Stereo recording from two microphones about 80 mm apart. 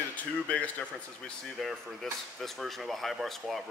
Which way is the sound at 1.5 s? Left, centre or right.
Centre.